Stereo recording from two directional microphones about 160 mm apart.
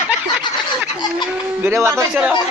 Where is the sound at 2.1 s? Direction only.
5° right (ahead or behind).